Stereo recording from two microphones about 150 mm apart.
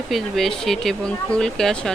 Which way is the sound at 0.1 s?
Centre (ahead or behind).